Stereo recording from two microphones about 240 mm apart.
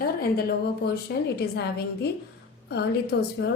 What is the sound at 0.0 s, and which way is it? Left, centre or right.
A woman's voice, left.